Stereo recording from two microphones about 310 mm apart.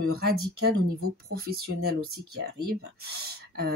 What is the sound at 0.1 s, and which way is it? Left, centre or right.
Speech, right.